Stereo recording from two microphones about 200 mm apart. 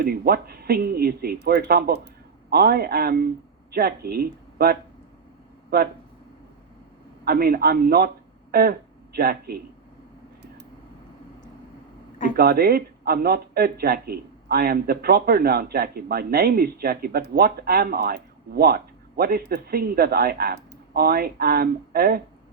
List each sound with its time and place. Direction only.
0.0 s speech: 50° right (ahead or behind)
7.3 s speech: 50° right (ahead or behind)
12.4 s speech: 50° right (ahead or behind)